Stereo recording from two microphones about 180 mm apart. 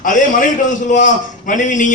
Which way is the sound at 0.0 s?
45° left (ahead or behind).